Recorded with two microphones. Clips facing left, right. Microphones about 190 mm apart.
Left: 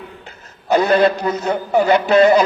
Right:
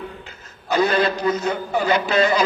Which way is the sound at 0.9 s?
40° left (ahead or behind).